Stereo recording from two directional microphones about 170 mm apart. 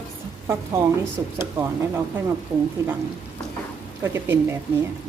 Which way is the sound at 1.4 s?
15° right (ahead or behind).